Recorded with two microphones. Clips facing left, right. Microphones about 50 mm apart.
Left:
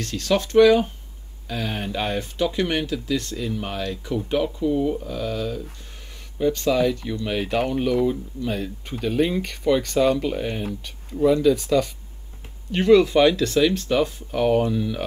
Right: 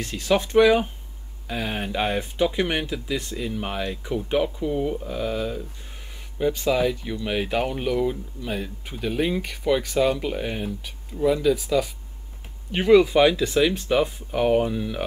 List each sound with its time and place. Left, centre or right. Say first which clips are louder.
0.0 s speech: even; centre